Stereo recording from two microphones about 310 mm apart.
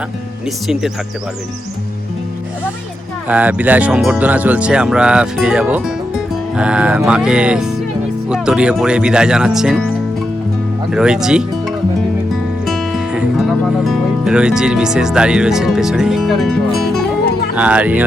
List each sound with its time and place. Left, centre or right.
3.2 s speech: centre
10.9 s speech: centre
12.6 s music: centre
17.5 s speech: centre